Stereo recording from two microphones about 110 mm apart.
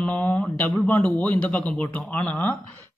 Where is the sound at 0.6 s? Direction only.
10° left (ahead or behind).